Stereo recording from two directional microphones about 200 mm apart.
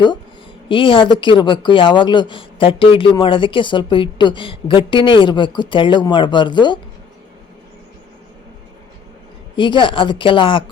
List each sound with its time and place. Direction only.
0.7 s speech: 25° left (ahead or behind)
9.6 s speech: 25° left (ahead or behind)